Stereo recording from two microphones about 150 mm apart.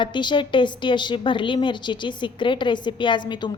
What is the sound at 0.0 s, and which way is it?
A woman's voice, 30° left (ahead or behind).